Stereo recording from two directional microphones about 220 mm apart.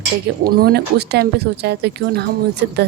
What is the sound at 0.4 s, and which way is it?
Speech, 45° right (ahead or behind).